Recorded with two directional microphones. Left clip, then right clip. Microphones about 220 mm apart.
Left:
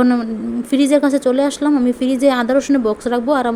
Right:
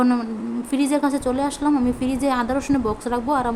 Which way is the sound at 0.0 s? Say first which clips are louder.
Left 5 dB; 15° left (ahead or behind).